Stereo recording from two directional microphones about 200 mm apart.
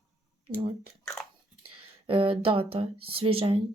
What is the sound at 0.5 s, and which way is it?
Speech, 20° right (ahead or behind).